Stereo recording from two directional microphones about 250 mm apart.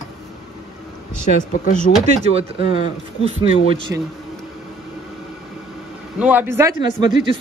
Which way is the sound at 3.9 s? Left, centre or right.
Centre.